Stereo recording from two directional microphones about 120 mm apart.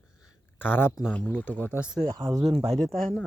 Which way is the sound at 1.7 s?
10° right (ahead or behind).